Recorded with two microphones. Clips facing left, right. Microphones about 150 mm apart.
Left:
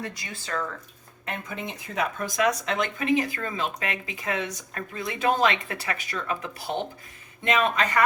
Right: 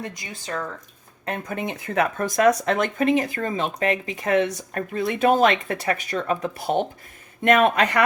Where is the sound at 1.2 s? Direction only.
40° right (ahead or behind).